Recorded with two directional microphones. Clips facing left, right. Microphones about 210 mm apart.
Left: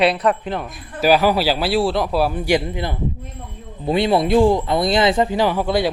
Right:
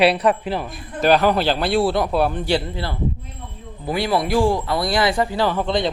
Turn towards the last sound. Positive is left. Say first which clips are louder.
# left 2 dB
turn(degrees=5)  # may be behind; listen again after turning